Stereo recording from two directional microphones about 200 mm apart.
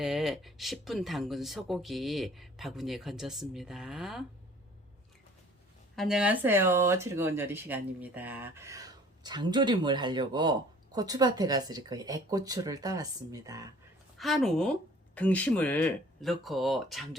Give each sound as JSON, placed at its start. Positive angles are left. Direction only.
{"t": 0.0, "sound": "speech", "side_deg": 0}
{"t": 6.0, "sound": "speech", "side_deg": -5}
{"t": 14.2, "sound": "speech", "side_deg": 0}